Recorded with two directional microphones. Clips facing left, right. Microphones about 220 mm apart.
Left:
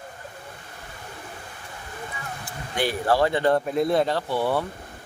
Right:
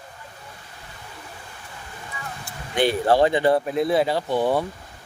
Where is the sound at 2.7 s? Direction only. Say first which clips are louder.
Right 4 dB; 25° right (ahead or behind).